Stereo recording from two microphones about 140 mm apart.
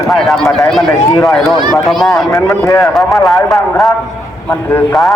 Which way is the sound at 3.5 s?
Centre (ahead or behind).